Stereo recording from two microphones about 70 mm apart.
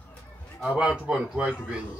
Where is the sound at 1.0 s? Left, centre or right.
Centre.